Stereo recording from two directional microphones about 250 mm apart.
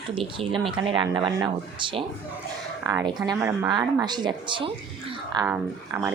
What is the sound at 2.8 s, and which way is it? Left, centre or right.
Speech, centre.